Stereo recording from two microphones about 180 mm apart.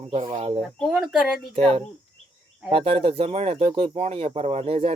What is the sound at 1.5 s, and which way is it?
Speech, 35° right (ahead or behind).